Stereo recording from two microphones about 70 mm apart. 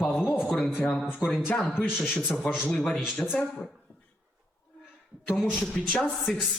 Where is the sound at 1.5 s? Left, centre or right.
Centre.